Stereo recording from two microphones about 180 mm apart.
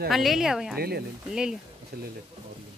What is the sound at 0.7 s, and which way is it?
Speech, 60° right (ahead or behind).